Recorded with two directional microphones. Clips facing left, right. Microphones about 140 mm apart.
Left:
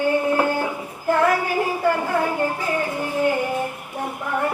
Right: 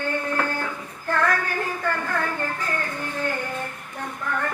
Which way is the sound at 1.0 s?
15° left (ahead or behind).